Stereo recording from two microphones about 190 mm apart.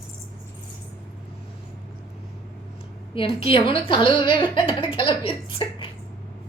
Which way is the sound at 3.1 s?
30° left (ahead or behind).